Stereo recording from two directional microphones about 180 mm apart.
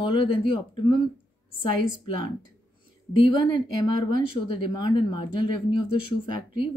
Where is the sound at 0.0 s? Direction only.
25° left (ahead or behind).